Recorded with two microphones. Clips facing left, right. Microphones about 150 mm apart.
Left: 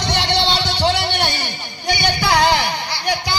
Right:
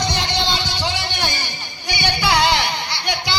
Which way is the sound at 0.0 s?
65° left (ahead or behind).